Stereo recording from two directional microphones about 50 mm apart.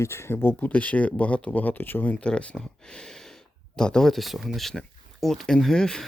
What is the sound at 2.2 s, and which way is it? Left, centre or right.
Speech, left.